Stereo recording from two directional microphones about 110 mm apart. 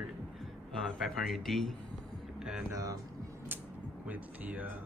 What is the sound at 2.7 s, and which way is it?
Speech, 30° right (ahead or behind).